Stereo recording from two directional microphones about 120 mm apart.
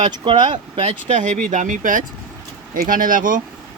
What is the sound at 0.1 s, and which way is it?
Speech, 45° right (ahead or behind).